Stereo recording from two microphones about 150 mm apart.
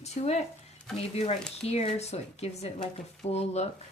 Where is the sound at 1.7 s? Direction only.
45° left (ahead or behind).